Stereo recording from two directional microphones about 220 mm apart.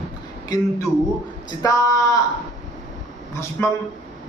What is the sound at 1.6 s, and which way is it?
Speech, 15° left (ahead or behind).